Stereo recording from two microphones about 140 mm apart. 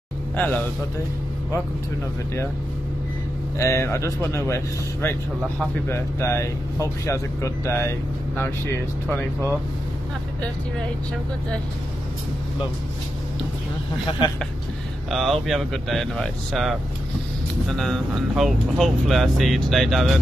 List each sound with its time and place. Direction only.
0.4 s a man's voice: 10° left (ahead or behind)
3.5 s speech: 20° left (ahead or behind)
14.2 s speech: 35° left (ahead or behind)
15.0 s speech: centre (ahead or behind)